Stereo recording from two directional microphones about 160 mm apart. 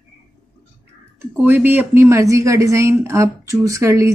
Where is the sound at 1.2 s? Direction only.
10° right (ahead or behind).